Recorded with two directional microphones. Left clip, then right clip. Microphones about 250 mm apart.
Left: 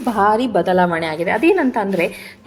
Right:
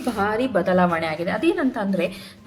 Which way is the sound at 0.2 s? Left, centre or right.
Centre.